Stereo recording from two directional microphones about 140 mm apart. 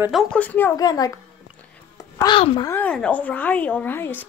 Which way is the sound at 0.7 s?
30° left (ahead or behind).